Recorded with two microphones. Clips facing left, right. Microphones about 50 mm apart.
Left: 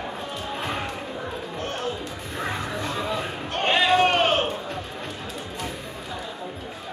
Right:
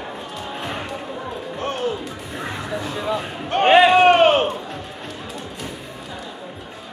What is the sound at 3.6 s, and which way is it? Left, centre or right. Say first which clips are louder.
Run: right 8 dB; right.